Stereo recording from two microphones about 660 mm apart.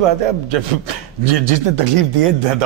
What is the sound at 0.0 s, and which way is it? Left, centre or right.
A man's voice, right.